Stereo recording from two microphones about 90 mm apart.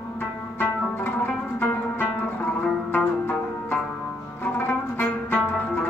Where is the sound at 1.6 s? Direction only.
20° left (ahead or behind).